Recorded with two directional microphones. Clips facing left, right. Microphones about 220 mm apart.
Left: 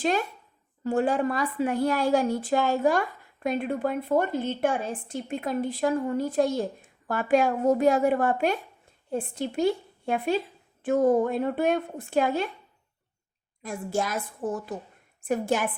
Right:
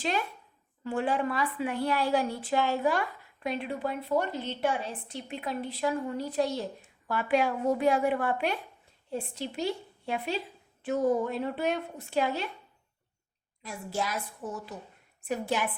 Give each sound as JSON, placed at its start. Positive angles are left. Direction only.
{"t": 0.0, "sound": "a woman's voice", "side_deg": 45}
{"t": 13.6, "sound": "a woman's voice", "side_deg": 50}